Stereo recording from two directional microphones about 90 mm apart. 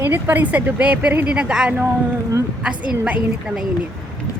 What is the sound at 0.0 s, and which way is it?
A woman's voice, 20° right (ahead or behind).